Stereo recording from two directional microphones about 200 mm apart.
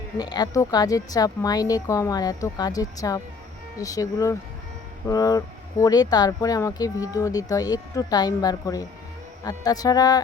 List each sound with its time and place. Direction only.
0.2 s a woman's voice: 20° left (ahead or behind)